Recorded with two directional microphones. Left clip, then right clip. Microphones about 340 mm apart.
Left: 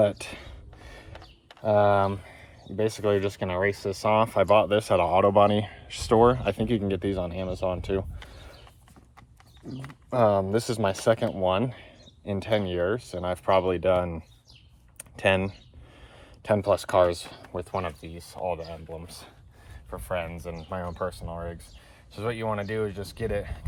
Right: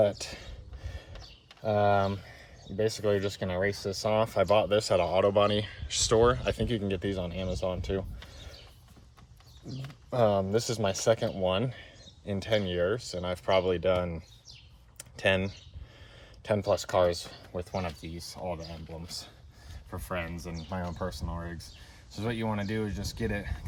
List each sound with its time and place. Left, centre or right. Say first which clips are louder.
0.0 s a sound: left 3 dB; centre
1.6 s speech: left 5 dB; centre
9.8 s speech: left 4 dB; centre
15.2 s speech: left 4 dB; centre
20.7 s speech: left 4 dB; centre